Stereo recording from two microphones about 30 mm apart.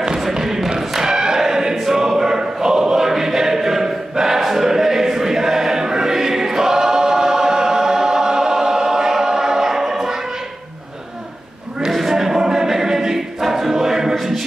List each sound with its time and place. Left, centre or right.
0.2 s a sound: centre
0.7 s choir: centre
12.1 s choir: centre